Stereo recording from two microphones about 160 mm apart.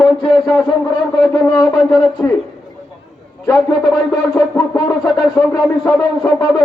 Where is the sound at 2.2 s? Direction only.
10° left (ahead or behind).